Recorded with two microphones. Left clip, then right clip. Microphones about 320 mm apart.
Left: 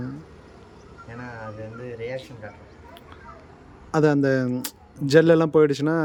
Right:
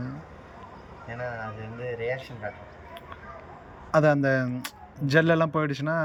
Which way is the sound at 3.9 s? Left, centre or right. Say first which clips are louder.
Left 1 dB; centre.